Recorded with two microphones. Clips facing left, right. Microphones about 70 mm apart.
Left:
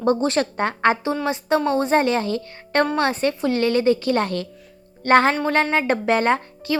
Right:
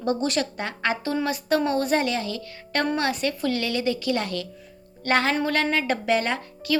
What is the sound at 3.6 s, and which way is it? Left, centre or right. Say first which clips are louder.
Speech: left 7 dB; left.